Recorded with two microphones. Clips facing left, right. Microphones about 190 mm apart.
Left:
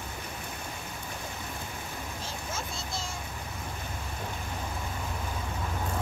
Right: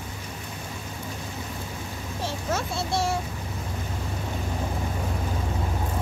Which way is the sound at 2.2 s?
70° right (ahead or behind).